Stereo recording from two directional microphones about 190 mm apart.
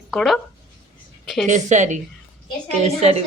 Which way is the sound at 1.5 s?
40° right (ahead or behind).